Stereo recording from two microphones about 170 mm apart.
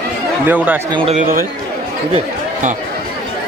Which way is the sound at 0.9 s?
35° right (ahead or behind).